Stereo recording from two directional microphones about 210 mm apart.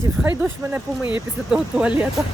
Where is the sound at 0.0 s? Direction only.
10° right (ahead or behind).